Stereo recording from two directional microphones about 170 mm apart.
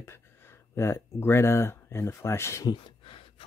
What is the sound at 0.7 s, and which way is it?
Speech, 15° left (ahead or behind).